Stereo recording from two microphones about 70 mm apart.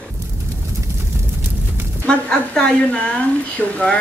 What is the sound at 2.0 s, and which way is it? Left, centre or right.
A woman's voice, centre.